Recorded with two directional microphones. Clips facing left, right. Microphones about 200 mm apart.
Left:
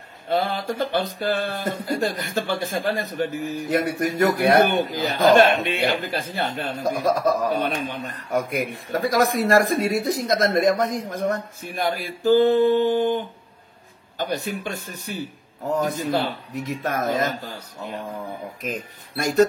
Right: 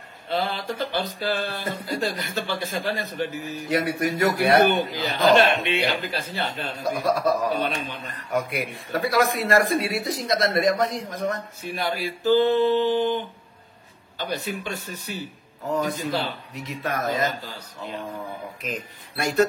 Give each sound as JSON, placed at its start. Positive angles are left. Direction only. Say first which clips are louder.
{"t": 0.3, "sound": "a man's voice", "louder": "left 3 dB", "side_deg": 50}
{"t": 16.6, "sound": "a man's voice", "louder": "left 2 dB", "side_deg": 45}
{"t": 19.1, "sound": "a man's voice", "louder": "left 3 dB", "side_deg": 45}